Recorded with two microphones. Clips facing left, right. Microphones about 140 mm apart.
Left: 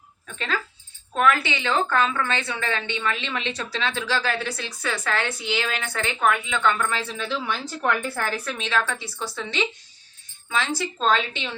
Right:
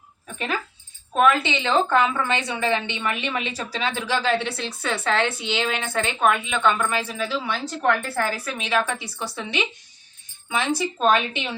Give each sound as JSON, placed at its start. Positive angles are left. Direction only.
{"t": 0.3, "sound": "a woman's voice", "side_deg": -15}